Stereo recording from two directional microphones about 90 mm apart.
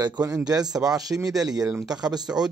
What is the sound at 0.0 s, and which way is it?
Speech, 40° right (ahead or behind).